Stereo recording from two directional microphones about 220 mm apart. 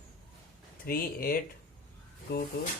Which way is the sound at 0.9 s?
40° left (ahead or behind).